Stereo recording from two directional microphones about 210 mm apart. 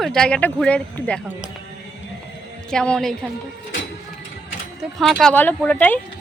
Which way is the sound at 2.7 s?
5° left (ahead or behind).